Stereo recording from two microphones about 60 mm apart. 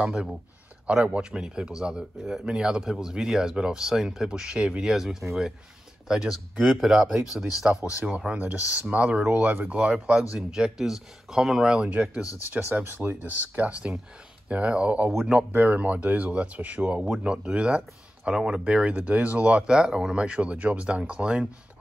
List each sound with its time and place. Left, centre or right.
0.0 s speech: centre
8.3 s speech: right
10.3 s speech: centre
12.4 s speech: right
15.0 s speech: centre
15.5 s speech: right